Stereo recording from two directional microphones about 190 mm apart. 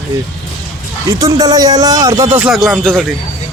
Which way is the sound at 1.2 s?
20° right (ahead or behind).